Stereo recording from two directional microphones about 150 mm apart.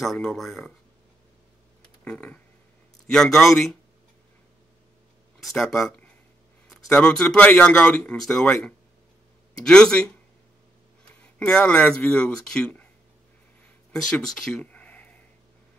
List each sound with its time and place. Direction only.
0.0 s speech: centre (ahead or behind)
2.0 s speech: 5° left (ahead or behind)
5.4 s speech: centre (ahead or behind)
11.3 s speech: 5° left (ahead or behind)
14.1 s a sound: 5° left (ahead or behind)